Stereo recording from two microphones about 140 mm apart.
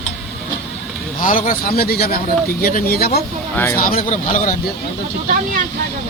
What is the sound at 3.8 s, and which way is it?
Speech, 85° left.